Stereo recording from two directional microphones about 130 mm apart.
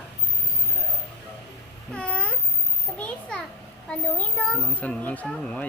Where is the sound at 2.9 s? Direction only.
10° left (ahead or behind).